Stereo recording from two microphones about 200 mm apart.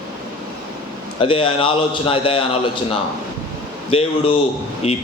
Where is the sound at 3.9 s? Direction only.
30° left (ahead or behind).